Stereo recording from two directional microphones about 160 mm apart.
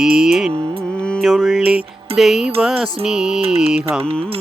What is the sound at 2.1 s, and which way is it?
Music, centre (ahead or behind).